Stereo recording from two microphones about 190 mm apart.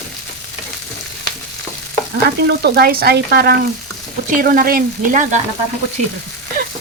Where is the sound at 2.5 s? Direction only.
60° right (ahead or behind).